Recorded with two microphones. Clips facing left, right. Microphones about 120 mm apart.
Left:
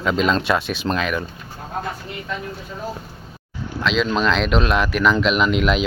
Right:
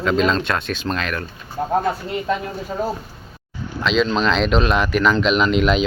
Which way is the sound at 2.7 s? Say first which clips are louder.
Right 10 dB; 50° right (ahead or behind).